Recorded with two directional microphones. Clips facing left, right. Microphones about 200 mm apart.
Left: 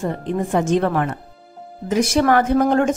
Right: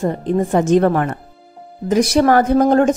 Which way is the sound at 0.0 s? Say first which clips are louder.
Right 5 dB; 40° right (ahead or behind).